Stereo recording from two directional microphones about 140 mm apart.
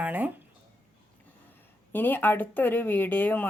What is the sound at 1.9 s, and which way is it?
Speech, 15° left (ahead or behind).